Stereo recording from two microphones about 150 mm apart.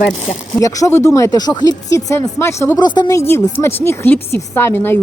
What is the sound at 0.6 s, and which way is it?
Speech, 20° left (ahead or behind).